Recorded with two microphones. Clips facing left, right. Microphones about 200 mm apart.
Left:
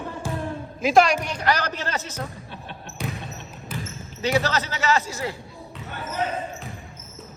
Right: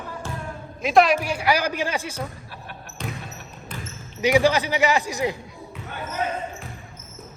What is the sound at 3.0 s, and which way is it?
Basketball bounce, 10° left (ahead or behind).